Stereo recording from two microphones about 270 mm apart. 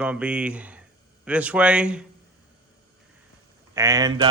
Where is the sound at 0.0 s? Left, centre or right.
Centre.